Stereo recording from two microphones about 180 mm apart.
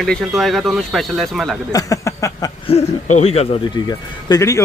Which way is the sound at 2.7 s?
35° left (ahead or behind).